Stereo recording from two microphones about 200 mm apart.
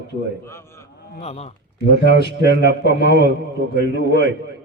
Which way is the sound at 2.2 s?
60° right (ahead or behind).